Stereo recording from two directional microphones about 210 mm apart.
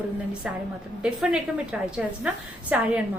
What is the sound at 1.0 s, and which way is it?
A woman's voice, 5° right (ahead or behind).